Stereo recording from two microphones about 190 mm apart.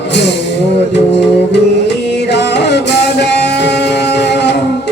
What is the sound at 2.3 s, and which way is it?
Music, 65° left (ahead or behind).